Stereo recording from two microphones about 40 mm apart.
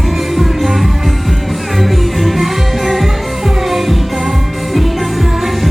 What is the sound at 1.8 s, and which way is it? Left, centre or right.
Music, centre.